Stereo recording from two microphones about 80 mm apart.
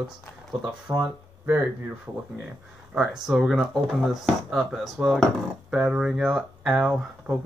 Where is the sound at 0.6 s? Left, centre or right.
Right.